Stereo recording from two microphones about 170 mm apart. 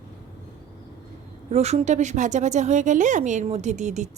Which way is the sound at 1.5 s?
40° right (ahead or behind).